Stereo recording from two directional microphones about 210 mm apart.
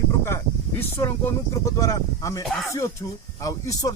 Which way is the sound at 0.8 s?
10° left (ahead or behind).